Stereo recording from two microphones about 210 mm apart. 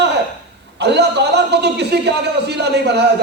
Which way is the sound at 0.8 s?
55° right (ahead or behind).